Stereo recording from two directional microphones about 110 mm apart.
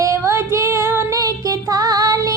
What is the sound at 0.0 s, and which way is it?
Female singing, 25° right (ahead or behind).